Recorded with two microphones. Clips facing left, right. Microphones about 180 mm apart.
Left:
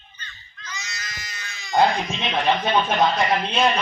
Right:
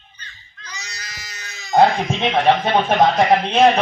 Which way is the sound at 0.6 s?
35° right (ahead or behind).